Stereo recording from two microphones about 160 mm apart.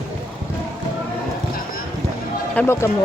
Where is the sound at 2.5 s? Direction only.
15° left (ahead or behind).